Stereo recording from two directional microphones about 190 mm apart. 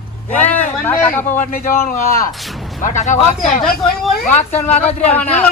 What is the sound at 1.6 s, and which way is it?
Speech, 15° left (ahead or behind).